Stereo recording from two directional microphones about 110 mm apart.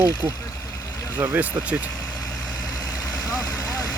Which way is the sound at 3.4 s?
35° left (ahead or behind).